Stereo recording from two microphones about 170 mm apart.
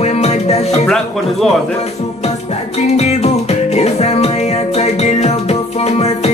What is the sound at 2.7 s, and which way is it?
Music, 40° left (ahead or behind).